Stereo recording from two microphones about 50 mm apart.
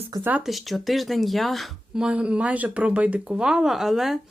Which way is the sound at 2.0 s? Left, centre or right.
Centre.